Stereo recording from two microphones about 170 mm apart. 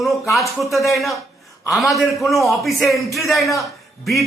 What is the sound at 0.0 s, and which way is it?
A man's voice, centre (ahead or behind).